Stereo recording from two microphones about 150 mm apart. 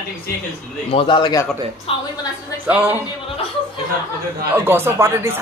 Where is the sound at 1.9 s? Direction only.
40° left (ahead or behind).